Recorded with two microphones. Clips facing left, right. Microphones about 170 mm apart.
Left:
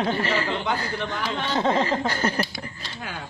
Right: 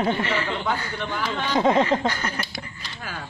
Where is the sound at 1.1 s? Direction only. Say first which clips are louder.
Right 5 dB; 10° right (ahead or behind).